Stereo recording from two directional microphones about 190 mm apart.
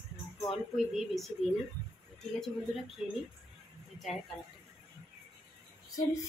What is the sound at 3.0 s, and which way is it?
Speech, 5° right (ahead or behind).